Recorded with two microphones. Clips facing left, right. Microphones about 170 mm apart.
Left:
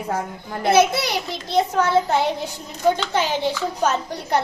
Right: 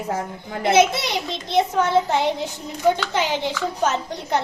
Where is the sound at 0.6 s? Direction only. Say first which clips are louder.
Even; 20° right (ahead or behind).